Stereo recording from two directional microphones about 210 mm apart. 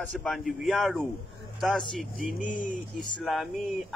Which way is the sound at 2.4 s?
40° left (ahead or behind).